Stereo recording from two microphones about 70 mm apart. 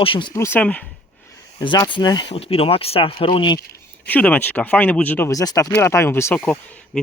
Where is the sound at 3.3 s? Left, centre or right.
Left.